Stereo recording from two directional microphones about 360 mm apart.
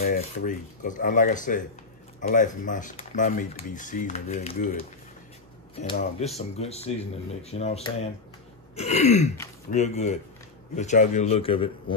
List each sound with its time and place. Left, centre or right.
0.0 s speech: left